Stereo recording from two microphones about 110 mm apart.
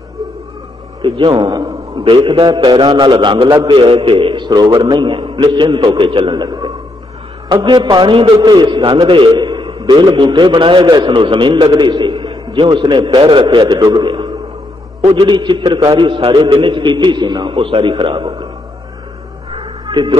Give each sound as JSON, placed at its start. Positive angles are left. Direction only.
{"t": 1.0, "sound": "a man's voice", "side_deg": -50}
{"t": 1.3, "sound": "a man's voice", "side_deg": -35}
{"t": 15.0, "sound": "a man's voice", "side_deg": -50}
{"t": 17.6, "sound": "a man's voice", "side_deg": -50}